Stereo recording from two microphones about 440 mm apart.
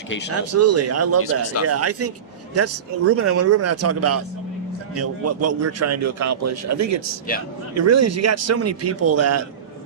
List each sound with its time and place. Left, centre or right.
0.3 s a man's voice: right
1.2 s speech: left
1.6 s a man's voice: right